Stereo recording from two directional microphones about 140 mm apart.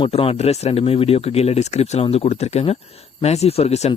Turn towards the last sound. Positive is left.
turn(degrees=50)  # may be behind; listen again after turning